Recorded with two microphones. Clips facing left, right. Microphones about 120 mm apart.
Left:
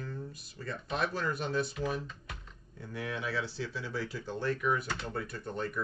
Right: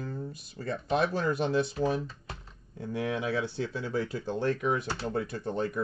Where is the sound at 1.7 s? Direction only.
30° right (ahead or behind).